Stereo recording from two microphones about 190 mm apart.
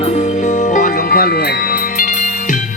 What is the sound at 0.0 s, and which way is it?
Music, 35° left (ahead or behind).